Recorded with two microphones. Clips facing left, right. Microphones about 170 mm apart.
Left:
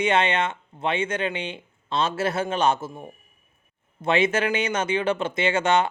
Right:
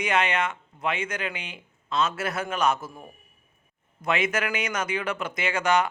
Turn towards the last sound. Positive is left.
turn(degrees=25)  # may be behind; listen again after turning